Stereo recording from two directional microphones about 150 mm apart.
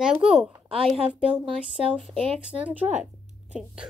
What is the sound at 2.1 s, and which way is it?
Speech, 40° right (ahead or behind).